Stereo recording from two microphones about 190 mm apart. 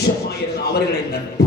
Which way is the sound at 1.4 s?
60° left (ahead or behind).